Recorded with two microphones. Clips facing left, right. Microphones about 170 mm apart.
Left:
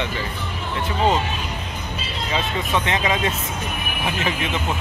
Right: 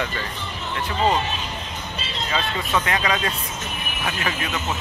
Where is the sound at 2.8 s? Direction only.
20° left (ahead or behind).